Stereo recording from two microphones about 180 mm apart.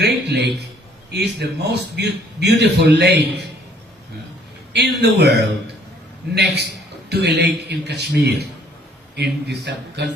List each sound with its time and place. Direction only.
0.0 s a man's voice: 70° right (ahead or behind)
4.7 s a man's voice: 65° right (ahead or behind)